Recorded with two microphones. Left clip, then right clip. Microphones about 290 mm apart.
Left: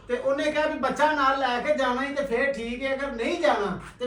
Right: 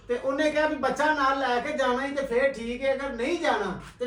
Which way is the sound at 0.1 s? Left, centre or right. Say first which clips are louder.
Left 1 dB; left.